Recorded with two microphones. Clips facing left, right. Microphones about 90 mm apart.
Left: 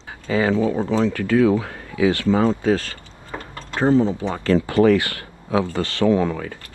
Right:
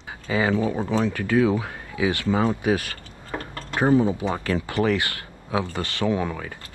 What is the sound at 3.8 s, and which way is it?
Speech, 15° right (ahead or behind).